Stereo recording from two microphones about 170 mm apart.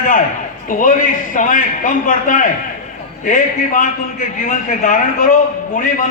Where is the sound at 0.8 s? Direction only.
50° left (ahead or behind).